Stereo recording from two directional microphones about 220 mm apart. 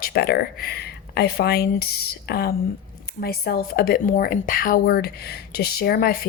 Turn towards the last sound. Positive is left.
turn(degrees=45)  # may be behind; listen again after turning